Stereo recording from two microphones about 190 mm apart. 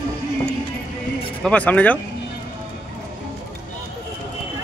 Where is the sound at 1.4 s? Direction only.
5° left (ahead or behind).